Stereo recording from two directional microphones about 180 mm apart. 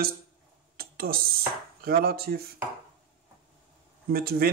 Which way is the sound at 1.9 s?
60° right (ahead or behind).